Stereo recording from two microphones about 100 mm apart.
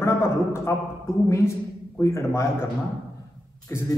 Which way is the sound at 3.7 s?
30° left (ahead or behind).